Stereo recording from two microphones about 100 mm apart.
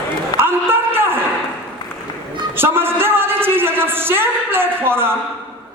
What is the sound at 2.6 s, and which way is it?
A man's voice, 20° right (ahead or behind).